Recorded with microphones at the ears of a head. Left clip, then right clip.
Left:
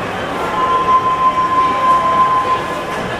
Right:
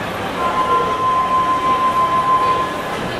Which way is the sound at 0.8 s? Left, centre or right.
Left.